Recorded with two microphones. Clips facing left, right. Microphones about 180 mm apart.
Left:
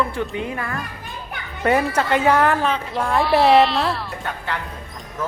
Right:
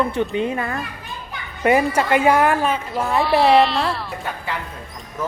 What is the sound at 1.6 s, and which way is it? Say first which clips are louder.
A woman's voice: right 2 dB; 10° right (ahead or behind).